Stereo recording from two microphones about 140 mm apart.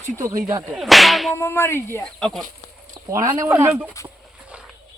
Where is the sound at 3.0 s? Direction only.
35° right (ahead or behind).